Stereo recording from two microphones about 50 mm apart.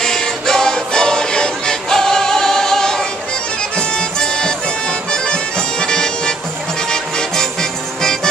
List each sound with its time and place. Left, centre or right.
0.0 s music: centre
4.2 s music: centre